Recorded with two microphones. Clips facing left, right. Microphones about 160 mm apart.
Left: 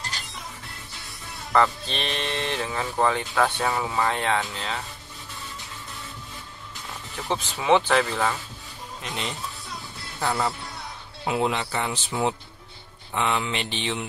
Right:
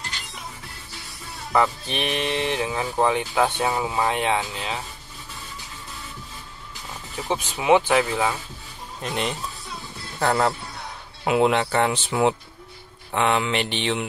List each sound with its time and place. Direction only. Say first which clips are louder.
1.5 s speech: even; 10° right (ahead or behind)
7.2 s speech: right 2 dB; 15° right (ahead or behind)
9.0 s speech: right 6 dB; 45° right (ahead or behind)
10.2 s speech: right 5 dB; 65° right (ahead or behind)